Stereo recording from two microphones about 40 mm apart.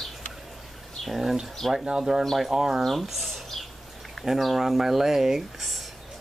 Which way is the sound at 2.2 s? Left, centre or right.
Centre.